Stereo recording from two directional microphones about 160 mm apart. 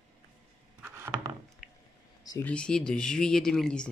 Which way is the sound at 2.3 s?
10° left (ahead or behind).